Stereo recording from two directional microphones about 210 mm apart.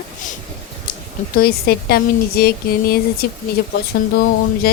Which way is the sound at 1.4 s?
45° left (ahead or behind).